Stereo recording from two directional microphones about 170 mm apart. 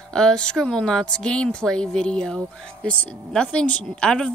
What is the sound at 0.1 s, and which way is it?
Speech, 5° left (ahead or behind).